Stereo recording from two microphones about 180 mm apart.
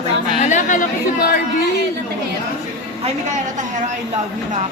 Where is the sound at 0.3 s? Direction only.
45° left (ahead or behind).